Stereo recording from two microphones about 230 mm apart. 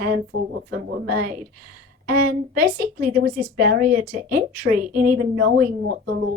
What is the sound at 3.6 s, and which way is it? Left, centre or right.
A woman's voice, right.